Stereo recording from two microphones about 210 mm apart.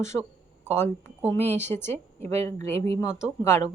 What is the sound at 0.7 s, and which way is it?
A woman's voice, 10° left (ahead or behind).